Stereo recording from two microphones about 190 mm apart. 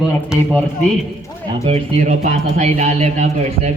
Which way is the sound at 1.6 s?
35° right (ahead or behind).